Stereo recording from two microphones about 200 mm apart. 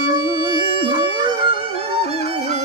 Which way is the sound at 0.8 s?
25° right (ahead or behind).